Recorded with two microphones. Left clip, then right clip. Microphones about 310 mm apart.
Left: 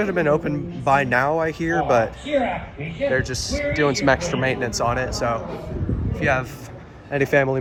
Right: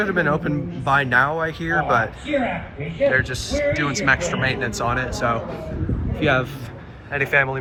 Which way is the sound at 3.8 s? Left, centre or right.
Left.